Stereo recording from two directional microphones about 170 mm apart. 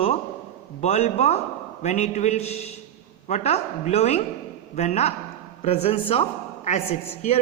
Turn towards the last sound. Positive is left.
turn(degrees=40)  # may be behind; listen again after turning